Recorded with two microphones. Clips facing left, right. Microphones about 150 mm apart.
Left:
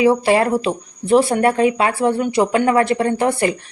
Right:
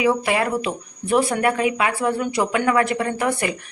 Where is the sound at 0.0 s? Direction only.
30° left (ahead or behind).